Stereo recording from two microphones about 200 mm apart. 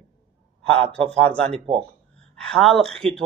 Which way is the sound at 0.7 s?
30° right (ahead or behind).